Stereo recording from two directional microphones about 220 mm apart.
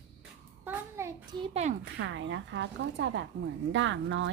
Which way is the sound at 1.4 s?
30° right (ahead or behind).